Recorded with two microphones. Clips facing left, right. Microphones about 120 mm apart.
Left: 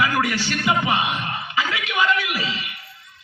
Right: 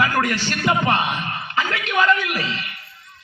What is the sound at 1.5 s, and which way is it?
Speech, 45° right (ahead or behind).